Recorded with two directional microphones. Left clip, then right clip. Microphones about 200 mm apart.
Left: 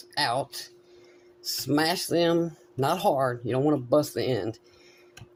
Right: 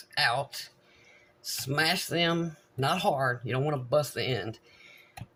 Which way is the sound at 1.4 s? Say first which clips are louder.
Left 3 dB; 50° left (ahead or behind).